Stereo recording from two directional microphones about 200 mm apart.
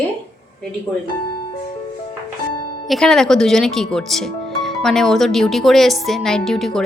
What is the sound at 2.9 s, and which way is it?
Speech, centre (ahead or behind).